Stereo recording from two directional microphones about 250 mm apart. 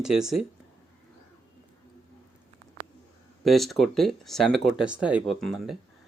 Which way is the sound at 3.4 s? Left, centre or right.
Centre.